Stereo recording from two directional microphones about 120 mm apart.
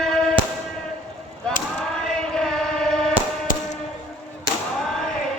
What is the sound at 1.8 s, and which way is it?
Chant, 5° left (ahead or behind).